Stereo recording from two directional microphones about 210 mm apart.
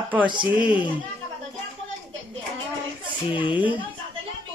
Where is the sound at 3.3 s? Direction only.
25° left (ahead or behind).